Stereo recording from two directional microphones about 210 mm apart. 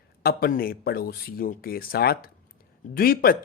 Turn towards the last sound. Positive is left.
turn(degrees=45)  # may be behind; listen again after turning